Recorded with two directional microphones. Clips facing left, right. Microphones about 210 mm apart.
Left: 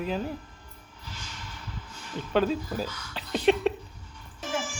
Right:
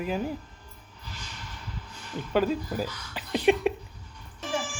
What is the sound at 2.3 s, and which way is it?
Speech, 10° right (ahead or behind).